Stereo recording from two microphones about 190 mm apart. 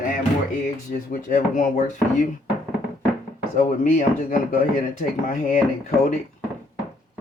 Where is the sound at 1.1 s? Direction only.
45° left (ahead or behind).